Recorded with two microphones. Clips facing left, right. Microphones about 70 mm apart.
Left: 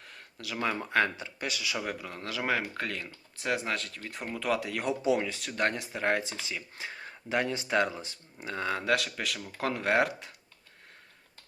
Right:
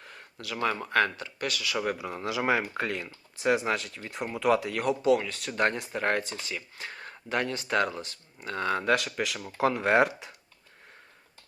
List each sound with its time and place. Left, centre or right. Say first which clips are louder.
0.0 s speech: right 1 dB; centre
1.8 s speech: right 5 dB; centre
5.0 s speech: right 3 dB; centre
5.4 s speech: right 3 dB; centre